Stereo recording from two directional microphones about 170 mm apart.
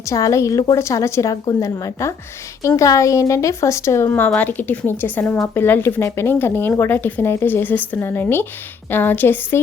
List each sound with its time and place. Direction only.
0.0 s a woman's voice: 20° left (ahead or behind)